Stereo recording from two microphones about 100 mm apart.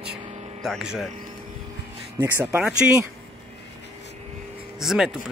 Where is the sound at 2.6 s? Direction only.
15° right (ahead or behind).